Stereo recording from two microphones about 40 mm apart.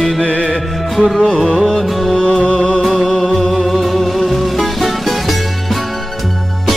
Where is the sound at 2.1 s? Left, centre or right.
Centre.